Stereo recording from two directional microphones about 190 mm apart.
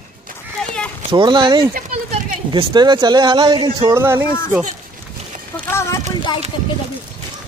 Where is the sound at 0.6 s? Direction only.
5° left (ahead or behind).